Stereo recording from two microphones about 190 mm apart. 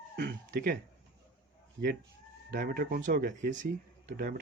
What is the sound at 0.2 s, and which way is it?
Speech, 60° right (ahead or behind).